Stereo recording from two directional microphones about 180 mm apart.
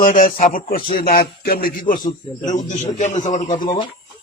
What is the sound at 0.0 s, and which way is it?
Speech, 50° left (ahead or behind).